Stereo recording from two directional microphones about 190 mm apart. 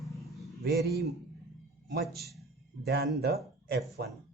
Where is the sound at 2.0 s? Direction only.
Centre (ahead or behind).